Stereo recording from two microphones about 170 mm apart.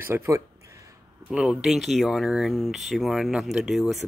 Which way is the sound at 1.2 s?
5° right (ahead or behind).